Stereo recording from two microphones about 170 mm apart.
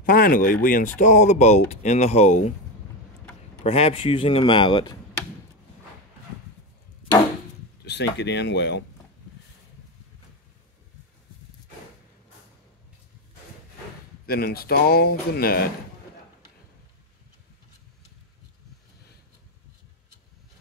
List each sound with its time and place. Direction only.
0.0 s speech: 55° left (ahead or behind)
3.6 s speech: 35° left (ahead or behind)
7.8 s speech: 90° left
14.2 s speech: 65° left (ahead or behind)